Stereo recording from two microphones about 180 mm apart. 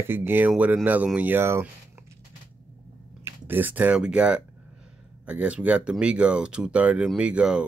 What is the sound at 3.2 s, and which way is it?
Speech, 10° right (ahead or behind).